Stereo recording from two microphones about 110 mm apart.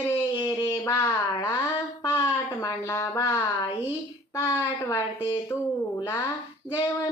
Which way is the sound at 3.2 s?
25° left (ahead or behind).